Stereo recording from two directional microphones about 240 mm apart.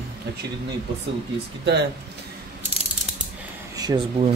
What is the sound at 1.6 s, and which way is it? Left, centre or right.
Speech, right.